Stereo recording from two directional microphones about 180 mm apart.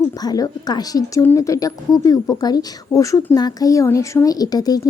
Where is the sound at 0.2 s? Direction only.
20° left (ahead or behind).